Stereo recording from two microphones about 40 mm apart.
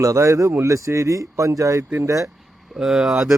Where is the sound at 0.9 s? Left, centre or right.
Right.